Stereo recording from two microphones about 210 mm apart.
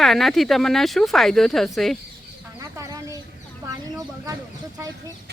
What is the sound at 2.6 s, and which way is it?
Chicken, 15° right (ahead or behind).